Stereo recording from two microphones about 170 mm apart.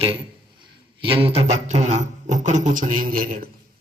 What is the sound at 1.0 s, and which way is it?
Beatboxing, 30° right (ahead or behind).